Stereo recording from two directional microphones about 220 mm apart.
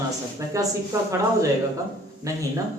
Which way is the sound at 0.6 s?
15° right (ahead or behind).